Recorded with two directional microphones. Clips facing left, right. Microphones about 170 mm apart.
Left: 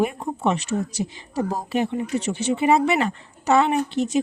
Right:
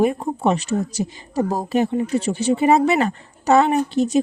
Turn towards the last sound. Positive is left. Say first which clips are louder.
# right 4 dB
turn(degrees=-35)  # may be behind; listen again after turning